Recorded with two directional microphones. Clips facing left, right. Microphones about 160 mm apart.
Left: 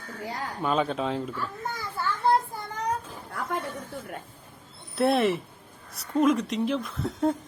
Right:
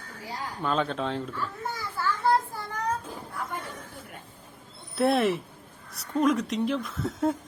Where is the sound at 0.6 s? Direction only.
10° left (ahead or behind).